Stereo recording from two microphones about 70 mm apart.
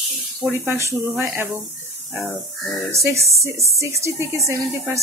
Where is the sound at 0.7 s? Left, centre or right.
Right.